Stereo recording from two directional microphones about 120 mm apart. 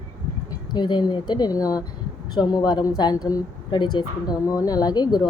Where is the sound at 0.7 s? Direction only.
40° left (ahead or behind).